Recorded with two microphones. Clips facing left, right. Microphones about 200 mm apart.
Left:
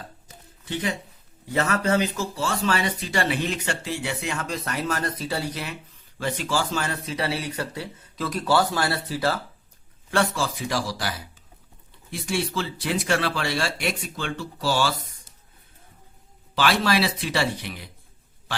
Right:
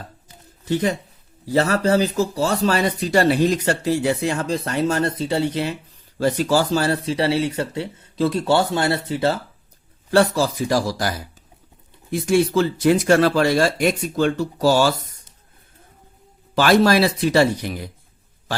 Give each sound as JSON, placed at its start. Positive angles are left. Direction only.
{"t": 0.6, "sound": "speech", "side_deg": -40}
{"t": 6.1, "sound": "speech", "side_deg": -40}
{"t": 10.1, "sound": "speech", "side_deg": -35}
{"t": 12.1, "sound": "speech", "side_deg": -45}
{"t": 16.6, "sound": "speech", "side_deg": -45}